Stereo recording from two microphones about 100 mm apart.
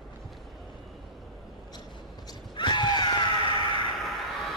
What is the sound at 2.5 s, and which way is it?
Screaming, 50° left (ahead or behind).